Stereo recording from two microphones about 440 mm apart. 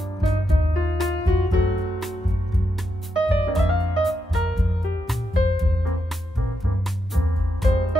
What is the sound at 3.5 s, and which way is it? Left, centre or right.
Music, centre.